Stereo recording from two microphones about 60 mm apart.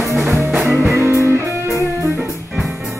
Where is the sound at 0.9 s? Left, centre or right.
Right.